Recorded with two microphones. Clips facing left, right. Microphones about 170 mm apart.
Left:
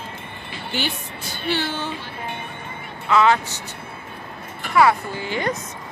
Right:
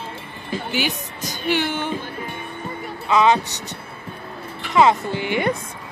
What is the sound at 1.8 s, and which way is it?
Music, 50° right (ahead or behind).